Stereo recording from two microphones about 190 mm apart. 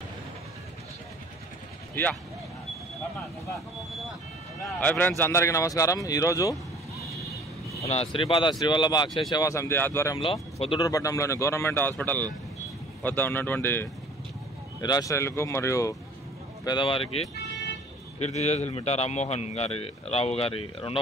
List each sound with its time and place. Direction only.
4.6 s speech: 10° left (ahead or behind)
7.8 s speech: 30° left (ahead or behind); by 10.1 s 10° left (ahead or behind)
10.1 s speech: 30° left (ahead or behind)
10.9 s speech: 15° left (ahead or behind)
16.6 s a man's voice: 25° left (ahead or behind)